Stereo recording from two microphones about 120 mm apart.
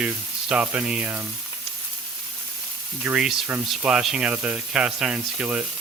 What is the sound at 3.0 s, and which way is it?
Speech, 10° right (ahead or behind).